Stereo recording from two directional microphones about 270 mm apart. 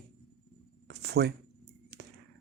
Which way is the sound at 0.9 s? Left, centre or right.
Right.